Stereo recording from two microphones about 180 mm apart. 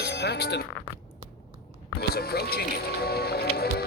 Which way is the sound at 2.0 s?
60° left (ahead or behind).